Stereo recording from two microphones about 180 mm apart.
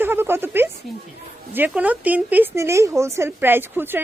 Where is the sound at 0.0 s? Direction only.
10° right (ahead or behind).